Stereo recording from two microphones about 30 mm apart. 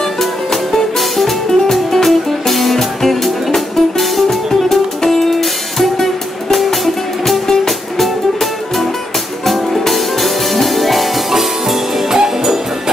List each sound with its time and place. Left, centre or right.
0.2 s music: centre
7.2 s music: centre